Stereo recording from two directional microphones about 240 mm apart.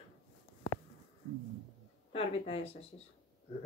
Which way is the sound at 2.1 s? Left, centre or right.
Left.